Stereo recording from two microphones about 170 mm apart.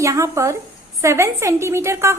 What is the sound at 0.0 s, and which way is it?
A woman's voice, 20° right (ahead or behind).